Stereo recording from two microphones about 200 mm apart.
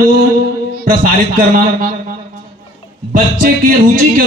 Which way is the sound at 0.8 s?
45° right (ahead or behind).